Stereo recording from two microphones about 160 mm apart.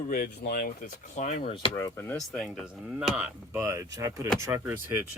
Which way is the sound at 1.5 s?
35° left (ahead or behind).